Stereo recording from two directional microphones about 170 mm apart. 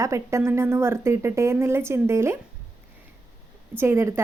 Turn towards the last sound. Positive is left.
turn(degrees=-15)  # may be behind; listen again after turning